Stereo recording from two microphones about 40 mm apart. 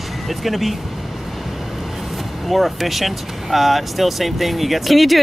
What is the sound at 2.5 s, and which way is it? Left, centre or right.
Speech, centre.